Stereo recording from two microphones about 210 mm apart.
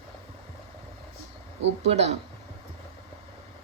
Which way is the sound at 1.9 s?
30° right (ahead or behind).